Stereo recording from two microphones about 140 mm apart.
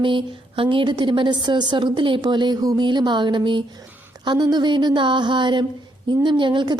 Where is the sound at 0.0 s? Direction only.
35° right (ahead or behind).